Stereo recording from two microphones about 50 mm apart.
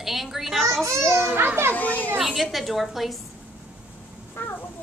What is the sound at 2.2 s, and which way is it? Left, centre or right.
A woman's voice, centre.